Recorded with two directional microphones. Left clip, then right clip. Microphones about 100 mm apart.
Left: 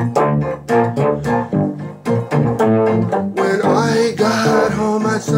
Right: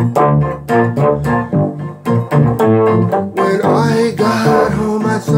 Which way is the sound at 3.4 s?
10° left (ahead or behind).